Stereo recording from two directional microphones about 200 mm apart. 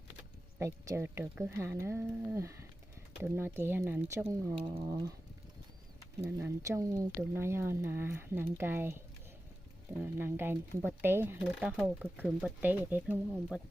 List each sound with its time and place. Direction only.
0.6 s speech: 15° right (ahead or behind)
6.2 s speech: 15° right (ahead or behind)
10.0 s speech: 10° right (ahead or behind)